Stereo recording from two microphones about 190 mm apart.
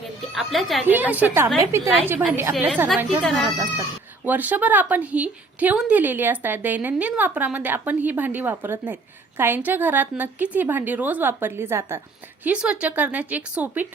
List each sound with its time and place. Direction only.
0.3 s a woman's voice: centre (ahead or behind)
4.3 s a woman's voice: 10° right (ahead or behind)